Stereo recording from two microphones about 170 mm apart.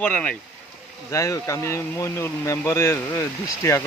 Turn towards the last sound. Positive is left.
turn(degrees=15)  # may be behind; listen again after turning